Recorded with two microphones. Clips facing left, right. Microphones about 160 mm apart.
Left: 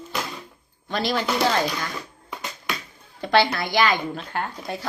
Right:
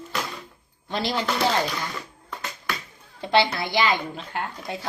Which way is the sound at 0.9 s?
25° right (ahead or behind).